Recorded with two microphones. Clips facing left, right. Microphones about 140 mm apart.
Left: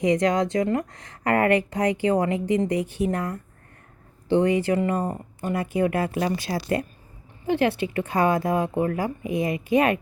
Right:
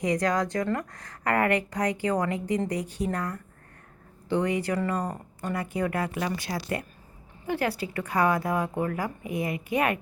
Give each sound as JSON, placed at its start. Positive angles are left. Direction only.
{"t": 0.0, "sound": "speech", "side_deg": 25}